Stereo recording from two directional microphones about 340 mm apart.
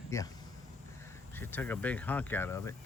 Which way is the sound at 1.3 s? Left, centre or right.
Centre.